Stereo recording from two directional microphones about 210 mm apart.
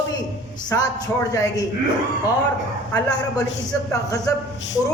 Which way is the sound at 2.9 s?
15° left (ahead or behind).